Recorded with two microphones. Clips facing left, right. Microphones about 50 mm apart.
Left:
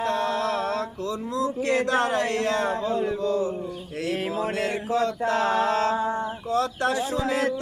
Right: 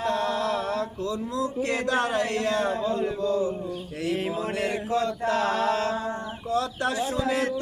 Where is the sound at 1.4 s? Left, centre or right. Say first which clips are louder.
Left 4 dB; left.